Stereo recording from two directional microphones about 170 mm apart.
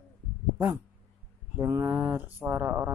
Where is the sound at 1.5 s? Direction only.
15° right (ahead or behind).